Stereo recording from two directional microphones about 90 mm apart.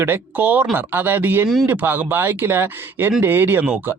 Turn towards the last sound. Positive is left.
turn(degrees=-25)  # may be behind; listen again after turning